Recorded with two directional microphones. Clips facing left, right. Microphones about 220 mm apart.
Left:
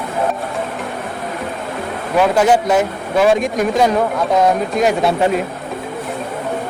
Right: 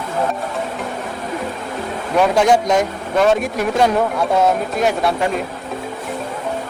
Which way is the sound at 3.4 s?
5° right (ahead or behind).